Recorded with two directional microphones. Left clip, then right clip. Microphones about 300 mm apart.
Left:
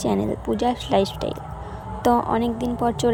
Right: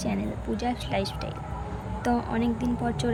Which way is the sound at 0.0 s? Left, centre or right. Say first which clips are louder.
Left 8 dB; centre.